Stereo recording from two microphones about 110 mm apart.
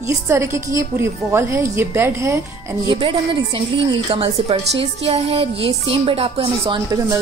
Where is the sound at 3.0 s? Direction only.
50° right (ahead or behind).